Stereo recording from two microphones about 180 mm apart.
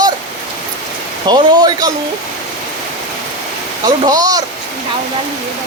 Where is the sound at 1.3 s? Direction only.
25° right (ahead or behind).